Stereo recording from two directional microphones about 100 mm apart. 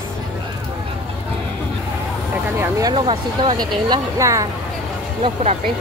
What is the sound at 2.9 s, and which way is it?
Speech, 55° right (ahead or behind).